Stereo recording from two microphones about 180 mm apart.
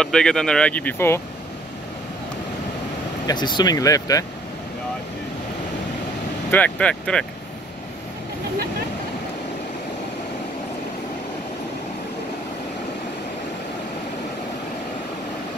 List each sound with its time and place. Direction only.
0.0 s speech: 5° left (ahead or behind)
3.3 s speech: 25° left (ahead or behind)
6.5 s speech: 5° left (ahead or behind)